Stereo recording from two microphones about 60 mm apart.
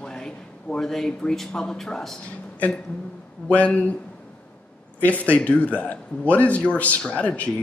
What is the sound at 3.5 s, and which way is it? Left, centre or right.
Speech, left.